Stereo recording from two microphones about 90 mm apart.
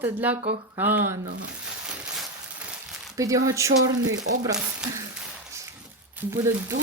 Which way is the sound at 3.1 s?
40° right (ahead or behind).